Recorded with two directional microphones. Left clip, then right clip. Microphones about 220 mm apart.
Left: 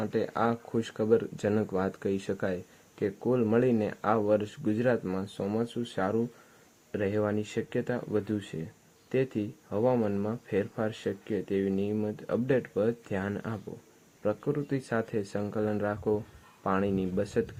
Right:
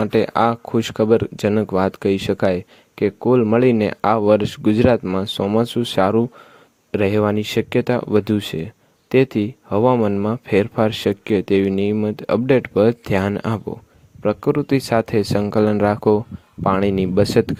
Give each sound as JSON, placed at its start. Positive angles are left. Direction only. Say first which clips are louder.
{"t": 0.0, "sound": "speech", "louder": "right 13 dB", "side_deg": -35}